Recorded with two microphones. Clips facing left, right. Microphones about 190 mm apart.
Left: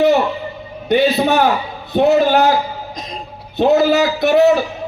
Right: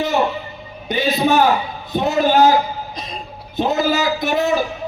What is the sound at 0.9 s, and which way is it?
A man's voice, 60° left (ahead or behind).